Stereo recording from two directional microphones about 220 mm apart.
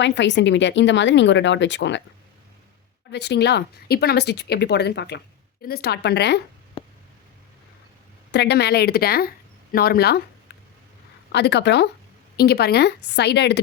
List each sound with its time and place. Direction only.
0.0 s speech: 55° left (ahead or behind)
3.1 s speech: 50° left (ahead or behind)
6.8 s a sound: 25° left (ahead or behind)
8.3 s speech: 50° left (ahead or behind)
11.3 s speech: 50° left (ahead or behind)